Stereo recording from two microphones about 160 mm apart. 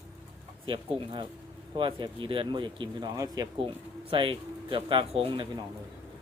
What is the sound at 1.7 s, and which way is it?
Speech, 30° right (ahead or behind).